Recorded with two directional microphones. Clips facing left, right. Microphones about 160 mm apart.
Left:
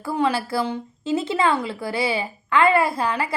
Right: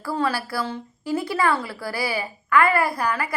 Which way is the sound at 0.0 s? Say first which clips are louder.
Left 3 dB; 20° left (ahead or behind).